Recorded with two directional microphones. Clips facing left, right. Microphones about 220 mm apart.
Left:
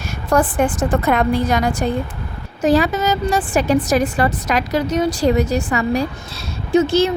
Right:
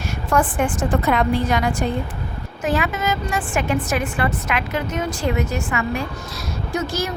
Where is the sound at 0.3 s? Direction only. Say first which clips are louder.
Left 4 dB; 40° left (ahead or behind).